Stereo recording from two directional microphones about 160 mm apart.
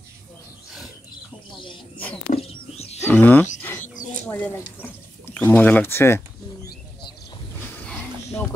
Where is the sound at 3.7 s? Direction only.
50° left (ahead or behind).